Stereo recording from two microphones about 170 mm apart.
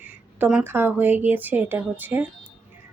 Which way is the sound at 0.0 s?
10° right (ahead or behind).